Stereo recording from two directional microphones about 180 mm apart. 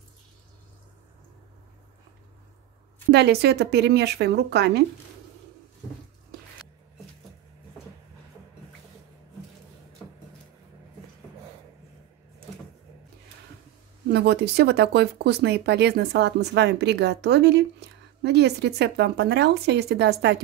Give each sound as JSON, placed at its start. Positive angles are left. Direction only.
{"t": 3.1, "sound": "speech", "side_deg": -65}
{"t": 14.1, "sound": "speech", "side_deg": -65}